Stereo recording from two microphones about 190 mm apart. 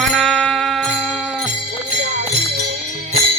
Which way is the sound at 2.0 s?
40° right (ahead or behind).